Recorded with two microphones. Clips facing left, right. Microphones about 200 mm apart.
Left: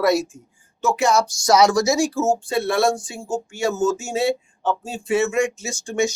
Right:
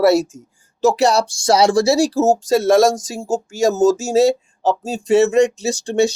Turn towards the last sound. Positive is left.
turn(degrees=-35)  # may be behind; listen again after turning